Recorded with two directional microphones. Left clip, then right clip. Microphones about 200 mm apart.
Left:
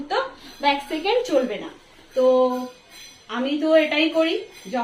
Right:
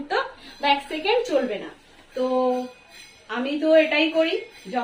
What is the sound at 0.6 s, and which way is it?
Speech, 5° left (ahead or behind).